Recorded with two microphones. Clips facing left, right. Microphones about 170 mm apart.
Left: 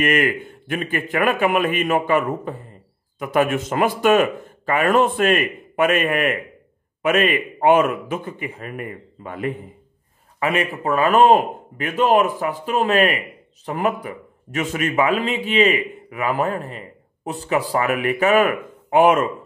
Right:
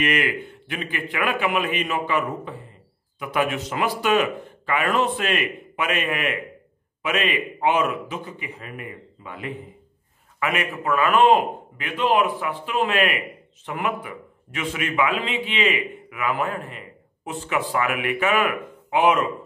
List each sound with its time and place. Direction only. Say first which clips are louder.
0.0 s speech: left 4 dB; 45° left (ahead or behind)
10.4 s a man's voice: left 4 dB; 30° left (ahead or behind)